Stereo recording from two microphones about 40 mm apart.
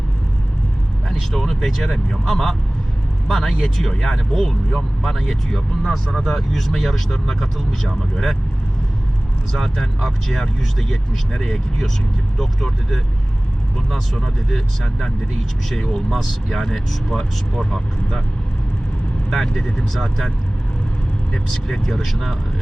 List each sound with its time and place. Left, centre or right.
1.3 s speech: centre
9.5 s speech: centre
15.7 s speech: centre
19.3 s speech: centre
21.3 s speech: centre